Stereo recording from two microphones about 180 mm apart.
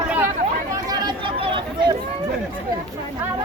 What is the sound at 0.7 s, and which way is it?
Chatter, 20° right (ahead or behind).